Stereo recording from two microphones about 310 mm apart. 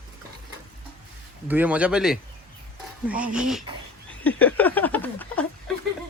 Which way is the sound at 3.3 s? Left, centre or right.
Centre.